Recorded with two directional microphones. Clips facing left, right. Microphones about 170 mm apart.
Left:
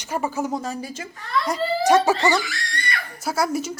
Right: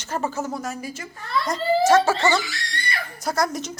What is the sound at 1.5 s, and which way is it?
A woman's voice, 15° left (ahead or behind).